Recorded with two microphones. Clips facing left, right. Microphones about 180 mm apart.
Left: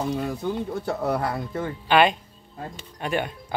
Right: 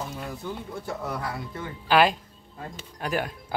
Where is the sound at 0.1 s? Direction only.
70° left (ahead or behind); by 1.7 s 50° left (ahead or behind).